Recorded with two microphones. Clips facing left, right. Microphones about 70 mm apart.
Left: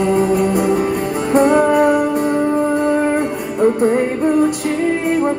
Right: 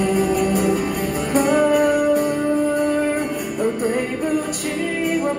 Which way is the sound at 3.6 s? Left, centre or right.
Left.